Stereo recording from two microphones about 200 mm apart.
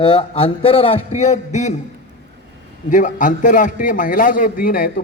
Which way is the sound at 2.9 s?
40° left (ahead or behind).